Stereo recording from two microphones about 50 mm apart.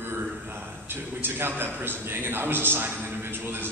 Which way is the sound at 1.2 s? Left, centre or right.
Right.